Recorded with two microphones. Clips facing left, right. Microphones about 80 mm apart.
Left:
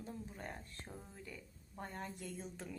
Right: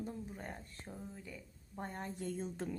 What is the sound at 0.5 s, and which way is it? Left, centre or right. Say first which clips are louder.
Speech: right 2 dB; centre.